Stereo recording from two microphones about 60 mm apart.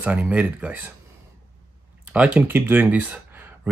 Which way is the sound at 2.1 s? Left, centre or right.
Right.